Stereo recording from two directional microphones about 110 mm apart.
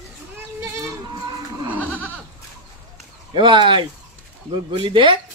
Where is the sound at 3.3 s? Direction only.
50° right (ahead or behind).